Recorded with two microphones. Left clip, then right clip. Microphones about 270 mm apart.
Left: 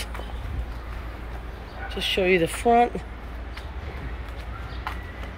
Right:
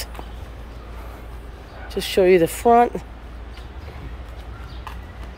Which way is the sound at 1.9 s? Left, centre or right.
Right.